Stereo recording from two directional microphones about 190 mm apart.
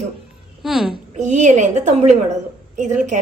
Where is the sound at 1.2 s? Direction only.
40° right (ahead or behind).